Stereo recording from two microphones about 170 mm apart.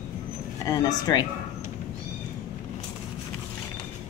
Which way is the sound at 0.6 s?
20° left (ahead or behind).